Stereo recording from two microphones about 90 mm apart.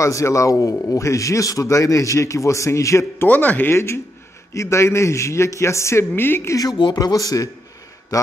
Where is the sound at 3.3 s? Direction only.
20° left (ahead or behind).